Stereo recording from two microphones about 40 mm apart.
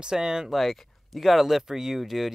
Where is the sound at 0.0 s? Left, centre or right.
Centre.